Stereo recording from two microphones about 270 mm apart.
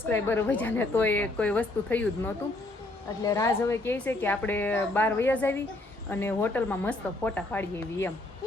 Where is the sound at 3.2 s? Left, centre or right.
Centre.